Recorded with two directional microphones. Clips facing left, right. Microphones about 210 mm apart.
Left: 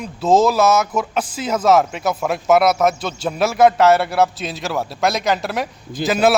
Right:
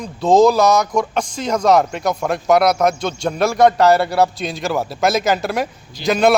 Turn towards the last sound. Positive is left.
turn(degrees=5)  # may be behind; listen again after turning